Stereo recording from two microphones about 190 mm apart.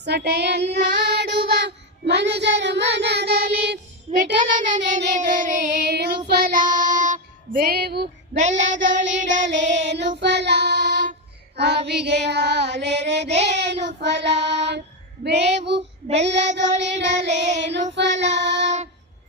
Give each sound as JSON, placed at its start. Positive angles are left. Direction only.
{"t": 0.0, "sound": "child singing", "side_deg": -60}
{"t": 4.4, "sound": "child singing", "side_deg": -40}
{"t": 5.9, "sound": "child singing", "side_deg": -60}
{"t": 8.8, "sound": "child singing", "side_deg": -70}
{"t": 9.6, "sound": "child singing", "side_deg": -35}
{"t": 9.9, "sound": "child singing", "side_deg": -65}